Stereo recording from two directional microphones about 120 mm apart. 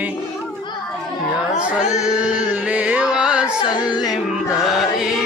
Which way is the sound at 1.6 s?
10° right (ahead or behind).